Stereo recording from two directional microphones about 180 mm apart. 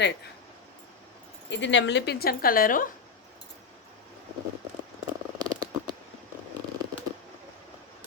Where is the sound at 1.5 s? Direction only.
90° left; by 2.9 s 50° left (ahead or behind).